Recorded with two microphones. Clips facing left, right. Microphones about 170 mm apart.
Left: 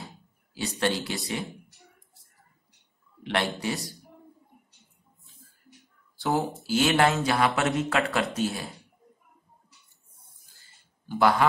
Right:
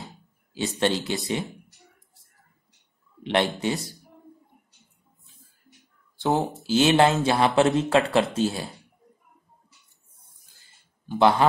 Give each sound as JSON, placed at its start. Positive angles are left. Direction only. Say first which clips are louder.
{"t": 0.6, "sound": "speech", "louder": "right 3 dB", "side_deg": -20}
{"t": 3.3, "sound": "speech", "louder": "right 4 dB", "side_deg": -20}
{"t": 6.1, "sound": "a sound", "louder": "right 3 dB", "side_deg": -20}
{"t": 6.6, "sound": "speech", "louder": "right 4 dB", "side_deg": -20}
{"t": 11.1, "sound": "speech", "louder": "right 3 dB", "side_deg": -20}